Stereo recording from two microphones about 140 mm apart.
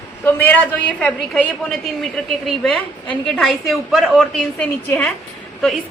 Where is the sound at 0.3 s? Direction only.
10° left (ahead or behind).